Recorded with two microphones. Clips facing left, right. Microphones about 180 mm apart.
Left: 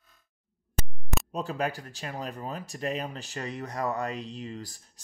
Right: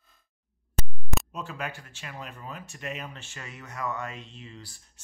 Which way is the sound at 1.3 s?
35° left (ahead or behind).